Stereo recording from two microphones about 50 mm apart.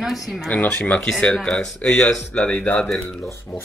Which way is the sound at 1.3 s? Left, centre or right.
Centre.